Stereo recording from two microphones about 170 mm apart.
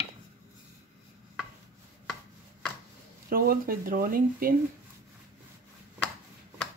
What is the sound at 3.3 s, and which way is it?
Speech, 60° right (ahead or behind).